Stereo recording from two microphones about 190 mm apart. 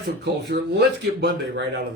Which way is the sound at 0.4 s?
60° right (ahead or behind).